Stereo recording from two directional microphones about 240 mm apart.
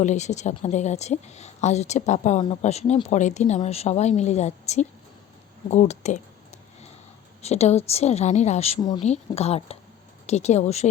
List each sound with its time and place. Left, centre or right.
0.0 s speech: left
7.4 s speech: left